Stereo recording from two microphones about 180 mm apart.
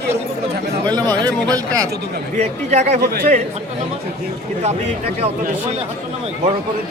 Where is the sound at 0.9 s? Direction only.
25° right (ahead or behind).